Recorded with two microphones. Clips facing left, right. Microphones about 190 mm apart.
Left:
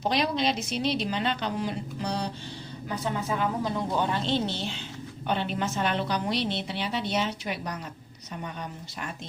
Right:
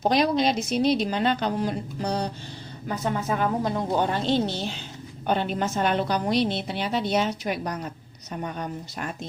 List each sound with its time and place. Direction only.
0.0 s a woman's voice: 45° right (ahead or behind)